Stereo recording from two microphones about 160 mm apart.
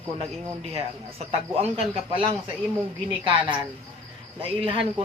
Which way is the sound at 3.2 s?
30° right (ahead or behind).